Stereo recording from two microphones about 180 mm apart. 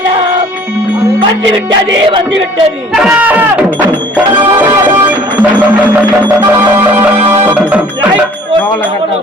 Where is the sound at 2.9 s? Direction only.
5° right (ahead or behind).